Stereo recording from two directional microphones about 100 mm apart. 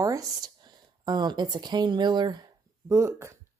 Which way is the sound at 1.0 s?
45° right (ahead or behind).